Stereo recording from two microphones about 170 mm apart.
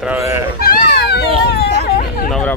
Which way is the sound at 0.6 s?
70° left (ahead or behind).